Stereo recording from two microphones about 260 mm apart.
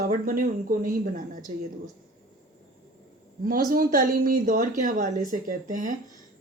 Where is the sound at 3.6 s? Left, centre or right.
Right.